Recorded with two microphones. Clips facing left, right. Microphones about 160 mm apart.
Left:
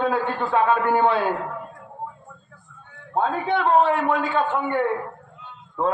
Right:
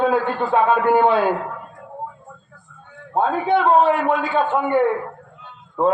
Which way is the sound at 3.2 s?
15° right (ahead or behind).